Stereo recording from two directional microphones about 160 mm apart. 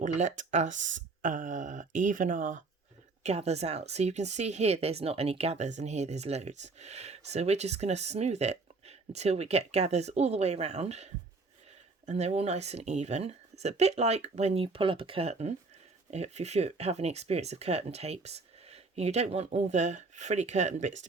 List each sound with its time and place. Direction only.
0.0 s speech: 50° right (ahead or behind)
3.2 s speech: 40° right (ahead or behind)